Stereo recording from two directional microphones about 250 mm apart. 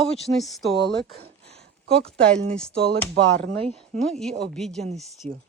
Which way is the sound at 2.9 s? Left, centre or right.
Right.